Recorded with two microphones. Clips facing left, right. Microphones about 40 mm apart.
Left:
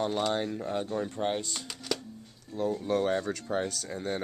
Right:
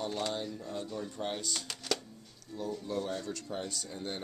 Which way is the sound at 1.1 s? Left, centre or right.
Left.